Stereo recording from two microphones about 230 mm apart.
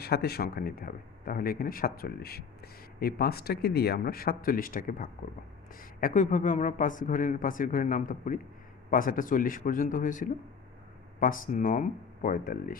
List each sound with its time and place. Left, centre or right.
0.0 s speech: left